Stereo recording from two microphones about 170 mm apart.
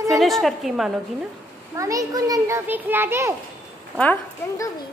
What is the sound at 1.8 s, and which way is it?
A child's voice, 20° right (ahead or behind).